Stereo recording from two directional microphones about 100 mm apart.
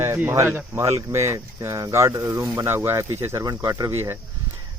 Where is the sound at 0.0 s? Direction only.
25° right (ahead or behind).